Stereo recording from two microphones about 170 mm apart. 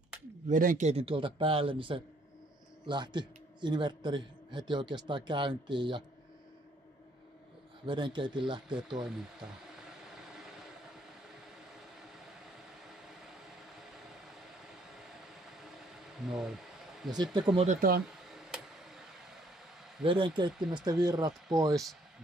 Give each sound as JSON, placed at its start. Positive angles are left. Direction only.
{"t": 0.5, "sound": "a man's voice", "side_deg": -50}
{"t": 7.8, "sound": "a man's voice", "side_deg": -30}
{"t": 8.6, "sound": "a sound", "side_deg": -5}
{"t": 15.5, "sound": "a sound", "side_deg": 0}
{"t": 17.1, "sound": "a man's voice", "side_deg": -25}
{"t": 17.6, "sound": "speech", "side_deg": -60}
{"t": 18.3, "sound": "a sound", "side_deg": 0}
{"t": 20.0, "sound": "a man's voice", "side_deg": -30}
{"t": 21.3, "sound": "speech", "side_deg": 0}